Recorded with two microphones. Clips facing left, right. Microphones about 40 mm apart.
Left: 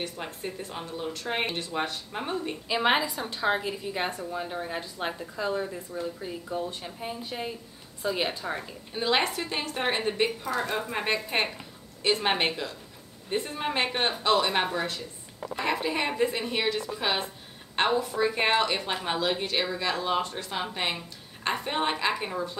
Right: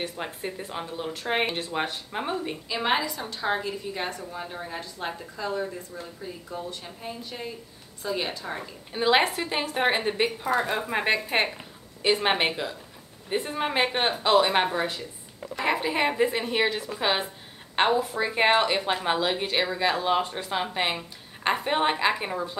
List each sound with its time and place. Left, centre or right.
0.0 s speech: centre
2.7 s a woman's voice: centre
4.6 s a woman's voice: centre
6.5 s a woman's voice: left
8.9 s speech: centre